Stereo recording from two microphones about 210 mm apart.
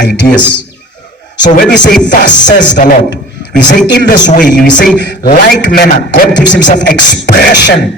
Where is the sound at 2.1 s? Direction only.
35° left (ahead or behind).